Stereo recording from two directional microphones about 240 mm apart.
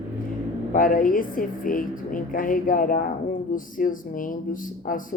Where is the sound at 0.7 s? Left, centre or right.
Left.